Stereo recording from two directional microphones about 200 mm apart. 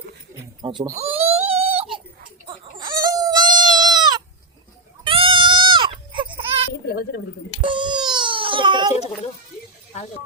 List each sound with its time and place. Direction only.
0.6 s speech: 20° right (ahead or behind)
0.9 s baby cry: 30° right (ahead or behind)
2.5 s chicken: 25° right (ahead or behind)
3.0 s goat: 20° right (ahead or behind)
5.0 s sheep: 25° right (ahead or behind)
6.8 s a sound: 50° left (ahead or behind)
7.6 s babbling: 25° right (ahead or behind)
9.9 s snake: 35° left (ahead or behind)